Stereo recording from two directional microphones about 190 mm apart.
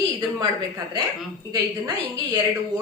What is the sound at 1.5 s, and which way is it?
Speech, 20° right (ahead or behind).